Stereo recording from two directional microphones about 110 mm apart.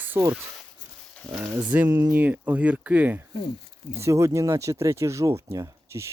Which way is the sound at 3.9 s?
25° right (ahead or behind).